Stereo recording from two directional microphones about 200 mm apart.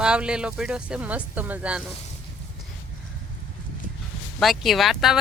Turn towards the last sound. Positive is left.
turn(degrees=0)  # may be behind; listen again after turning